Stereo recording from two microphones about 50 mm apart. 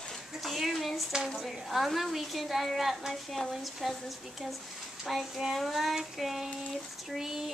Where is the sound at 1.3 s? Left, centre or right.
Centre.